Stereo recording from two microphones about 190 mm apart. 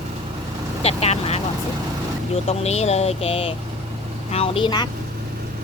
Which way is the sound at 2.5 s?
35° left (ahead or behind).